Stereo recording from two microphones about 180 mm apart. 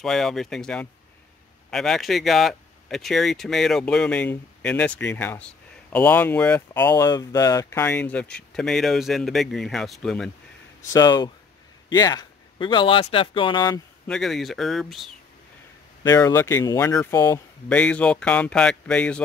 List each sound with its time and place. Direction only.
0.0 s speech: centre (ahead or behind)
10.9 s speech: 20° left (ahead or behind)
14.0 s speech: centre (ahead or behind)
16.0 s speech: 15° left (ahead or behind)